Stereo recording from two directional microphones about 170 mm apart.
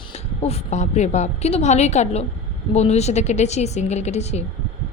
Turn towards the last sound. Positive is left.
turn(degrees=40)  # may be behind; listen again after turning